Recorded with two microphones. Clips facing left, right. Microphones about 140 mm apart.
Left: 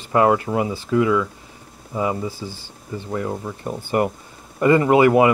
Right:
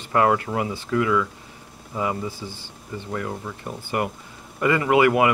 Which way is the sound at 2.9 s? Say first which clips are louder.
Left 4 dB; 20° left (ahead or behind).